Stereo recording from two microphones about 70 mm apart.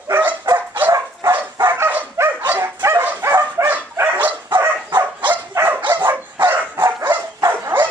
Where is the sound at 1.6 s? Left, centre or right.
Right.